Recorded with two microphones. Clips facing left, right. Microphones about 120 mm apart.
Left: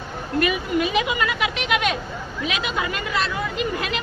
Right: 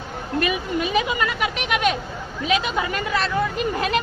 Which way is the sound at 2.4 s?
35° right (ahead or behind).